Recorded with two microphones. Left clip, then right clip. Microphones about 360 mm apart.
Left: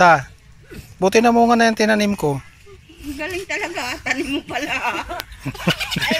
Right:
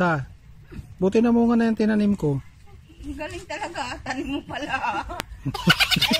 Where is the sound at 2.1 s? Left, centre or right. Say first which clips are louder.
Left 4 dB; left.